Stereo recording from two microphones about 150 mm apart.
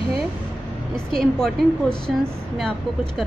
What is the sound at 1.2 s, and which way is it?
Speech, 5° left (ahead or behind).